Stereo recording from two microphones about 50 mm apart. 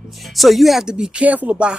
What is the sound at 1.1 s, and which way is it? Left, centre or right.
Speech, right.